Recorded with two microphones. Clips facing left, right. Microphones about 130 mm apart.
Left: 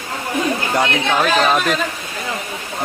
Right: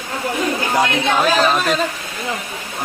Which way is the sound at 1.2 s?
Centre (ahead or behind).